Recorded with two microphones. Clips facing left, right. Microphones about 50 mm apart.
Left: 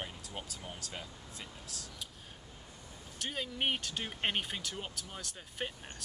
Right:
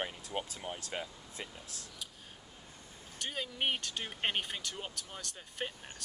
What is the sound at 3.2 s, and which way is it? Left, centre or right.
Speech, centre.